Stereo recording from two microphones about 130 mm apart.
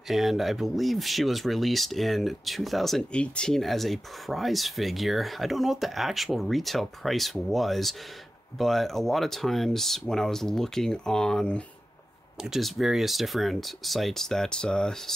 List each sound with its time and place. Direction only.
0.1 s speech: centre (ahead or behind)